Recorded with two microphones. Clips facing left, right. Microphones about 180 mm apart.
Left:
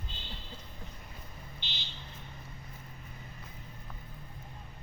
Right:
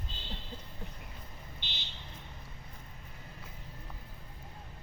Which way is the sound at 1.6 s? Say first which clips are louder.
Left 1 dB; 55° right (ahead or behind).